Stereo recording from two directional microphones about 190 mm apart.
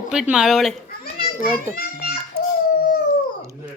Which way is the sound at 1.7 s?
50° left (ahead or behind).